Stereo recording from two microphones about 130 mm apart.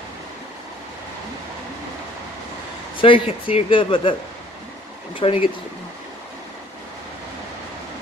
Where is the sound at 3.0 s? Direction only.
45° left (ahead or behind).